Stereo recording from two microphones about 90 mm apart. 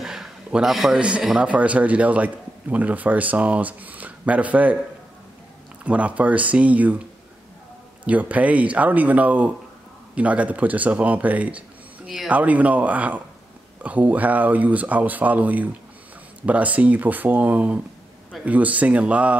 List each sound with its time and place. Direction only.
0.0 s a sound: 5° right (ahead or behind)
1.2 s a man's voice: 10° right (ahead or behind)
5.9 s a man's voice: 15° right (ahead or behind)
8.0 s a man's voice: 15° right (ahead or behind)